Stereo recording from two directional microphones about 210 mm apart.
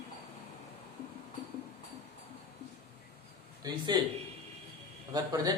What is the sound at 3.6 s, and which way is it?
Speech, 20° right (ahead or behind).